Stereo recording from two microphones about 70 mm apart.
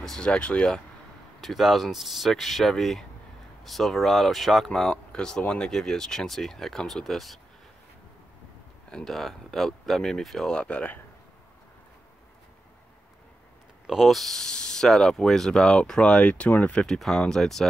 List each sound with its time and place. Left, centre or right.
0.0 s speech: centre
1.4 s speech: centre
5.7 s speech: centre
8.9 s speech: centre
13.8 s speech: centre